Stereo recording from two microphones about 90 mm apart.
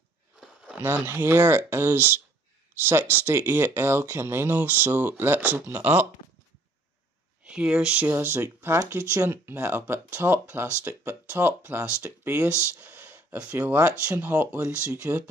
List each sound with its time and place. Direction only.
0.7 s speech: 20° right (ahead or behind)
7.4 s speech: 10° right (ahead or behind)
8.1 s speech: 25° right (ahead or behind)
12.7 s a sound: 25° right (ahead or behind)
13.6 s speech: 30° right (ahead or behind)